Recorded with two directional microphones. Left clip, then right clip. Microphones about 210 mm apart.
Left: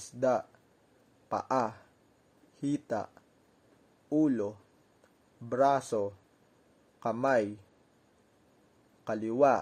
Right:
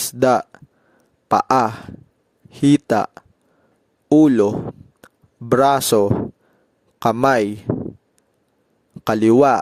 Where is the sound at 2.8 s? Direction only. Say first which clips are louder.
Right 17 dB; 50° right (ahead or behind).